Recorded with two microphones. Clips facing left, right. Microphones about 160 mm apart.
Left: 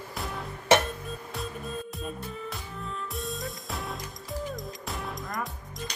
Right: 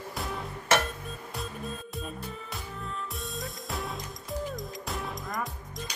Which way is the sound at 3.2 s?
Centre (ahead or behind).